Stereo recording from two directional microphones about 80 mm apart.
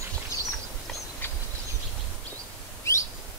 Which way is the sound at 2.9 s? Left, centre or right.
Left.